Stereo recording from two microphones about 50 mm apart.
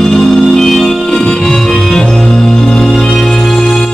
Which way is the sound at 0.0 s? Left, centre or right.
Centre.